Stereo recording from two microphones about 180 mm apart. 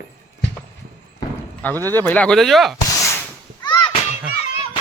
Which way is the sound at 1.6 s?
10° left (ahead or behind).